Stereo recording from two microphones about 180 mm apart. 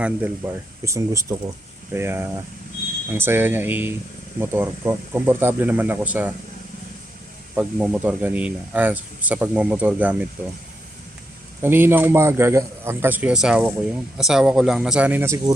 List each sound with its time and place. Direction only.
0.4 s speech: 10° right (ahead or behind)
7.5 s speech: 5° right (ahead or behind)
11.6 s speech: 10° right (ahead or behind)